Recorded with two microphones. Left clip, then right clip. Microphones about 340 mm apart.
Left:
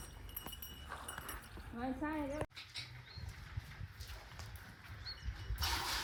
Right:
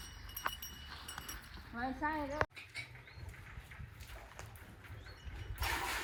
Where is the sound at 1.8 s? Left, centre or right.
Centre.